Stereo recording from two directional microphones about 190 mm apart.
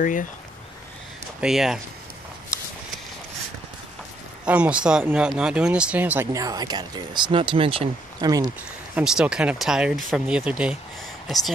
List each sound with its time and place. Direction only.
0.0 s speech: 45° left (ahead or behind)
1.4 s speech: centre (ahead or behind)
4.5 s speech: 5° right (ahead or behind)
8.9 s speech: 5° right (ahead or behind)